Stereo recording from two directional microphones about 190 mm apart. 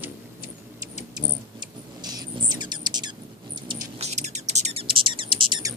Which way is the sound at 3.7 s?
35° right (ahead or behind).